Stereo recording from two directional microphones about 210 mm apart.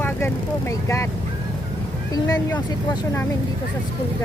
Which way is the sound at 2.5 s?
20° left (ahead or behind).